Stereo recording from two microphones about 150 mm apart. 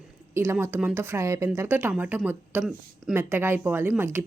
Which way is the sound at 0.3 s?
15° right (ahead or behind).